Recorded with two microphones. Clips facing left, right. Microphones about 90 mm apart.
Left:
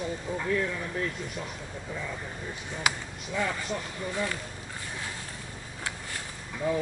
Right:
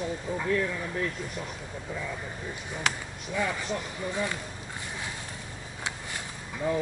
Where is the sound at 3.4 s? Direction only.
5° right (ahead or behind).